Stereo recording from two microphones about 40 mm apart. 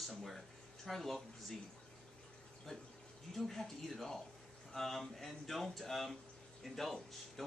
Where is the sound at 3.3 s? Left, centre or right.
Centre.